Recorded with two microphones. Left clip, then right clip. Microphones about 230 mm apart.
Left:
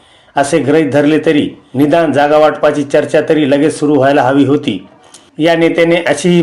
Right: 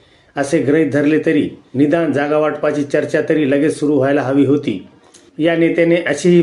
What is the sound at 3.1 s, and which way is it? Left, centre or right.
Speech, centre.